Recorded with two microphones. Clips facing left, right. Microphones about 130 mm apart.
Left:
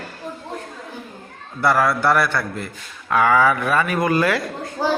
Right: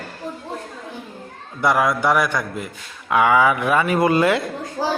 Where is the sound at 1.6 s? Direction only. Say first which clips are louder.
Even; 15° right (ahead or behind).